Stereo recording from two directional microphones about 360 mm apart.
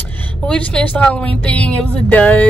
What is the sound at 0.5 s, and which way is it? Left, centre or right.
Speech, centre.